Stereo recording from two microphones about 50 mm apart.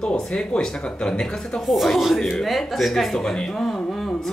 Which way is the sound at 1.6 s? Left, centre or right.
Centre.